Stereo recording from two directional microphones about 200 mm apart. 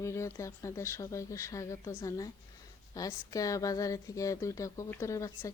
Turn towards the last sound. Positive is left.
turn(degrees=15)  # may be behind; listen again after turning